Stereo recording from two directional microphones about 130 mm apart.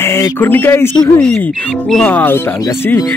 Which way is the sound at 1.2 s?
5° left (ahead or behind).